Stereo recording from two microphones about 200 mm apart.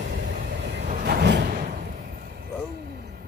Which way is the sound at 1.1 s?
55° right (ahead or behind).